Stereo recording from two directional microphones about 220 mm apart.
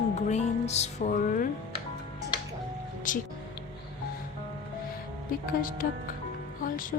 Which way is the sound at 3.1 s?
35° left (ahead or behind).